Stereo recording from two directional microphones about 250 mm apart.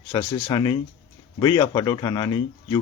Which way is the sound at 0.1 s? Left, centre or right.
Centre.